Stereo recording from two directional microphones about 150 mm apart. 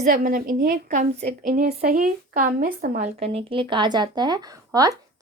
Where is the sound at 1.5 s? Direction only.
90° right; by 3.1 s 65° right (ahead or behind).